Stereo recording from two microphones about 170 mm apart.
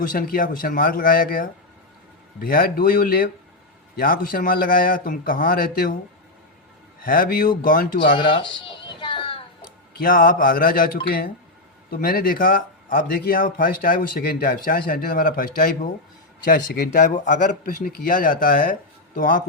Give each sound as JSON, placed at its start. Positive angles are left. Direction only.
{"t": 0.0, "sound": "speech", "side_deg": 55}
{"t": 7.0, "sound": "speech", "side_deg": 55}
{"t": 8.1, "sound": "a sound", "side_deg": 30}
{"t": 10.0, "sound": "speech", "side_deg": 55}